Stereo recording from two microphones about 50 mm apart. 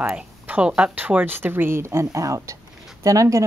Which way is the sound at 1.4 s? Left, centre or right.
Right.